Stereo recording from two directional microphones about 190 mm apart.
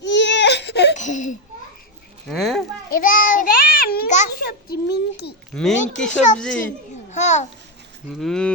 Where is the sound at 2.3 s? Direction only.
Centre (ahead or behind).